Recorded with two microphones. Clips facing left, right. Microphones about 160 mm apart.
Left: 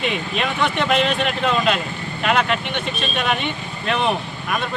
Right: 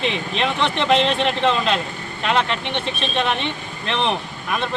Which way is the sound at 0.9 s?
30° right (ahead or behind).